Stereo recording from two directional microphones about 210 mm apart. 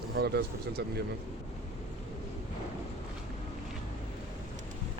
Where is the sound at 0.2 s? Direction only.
50° right (ahead or behind).